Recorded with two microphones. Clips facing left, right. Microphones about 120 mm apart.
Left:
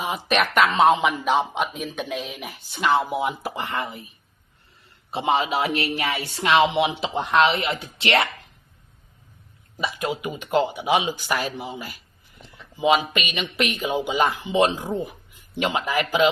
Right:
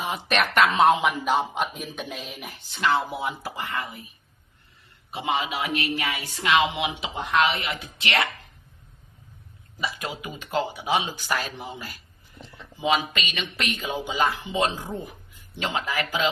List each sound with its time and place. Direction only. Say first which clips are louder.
0.0 s speech: left 2 dB; 5° left (ahead or behind)
2.7 s speech: left 3 dB; 15° left (ahead or behind)
5.1 s a woman's voice: left 5 dB; 30° left (ahead or behind)
10.2 s a man's voice: left 5 dB; 20° left (ahead or behind)